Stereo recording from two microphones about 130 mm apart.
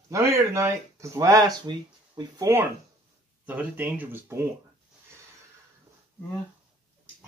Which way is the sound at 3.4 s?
15° right (ahead or behind).